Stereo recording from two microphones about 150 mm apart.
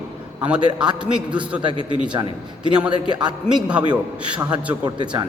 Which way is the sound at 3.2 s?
10° right (ahead or behind).